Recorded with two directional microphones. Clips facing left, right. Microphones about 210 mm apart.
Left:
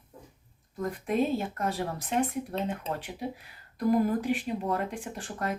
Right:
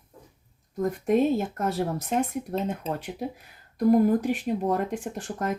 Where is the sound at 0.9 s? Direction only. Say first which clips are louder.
Right 5 dB; 45° right (ahead or behind).